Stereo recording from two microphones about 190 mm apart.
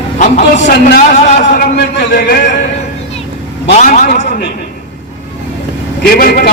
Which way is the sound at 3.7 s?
40° left (ahead or behind).